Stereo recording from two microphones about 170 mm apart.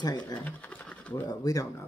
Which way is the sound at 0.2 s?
10° left (ahead or behind).